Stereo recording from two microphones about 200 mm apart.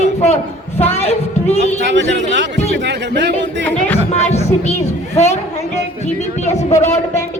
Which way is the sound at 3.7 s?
10° left (ahead or behind).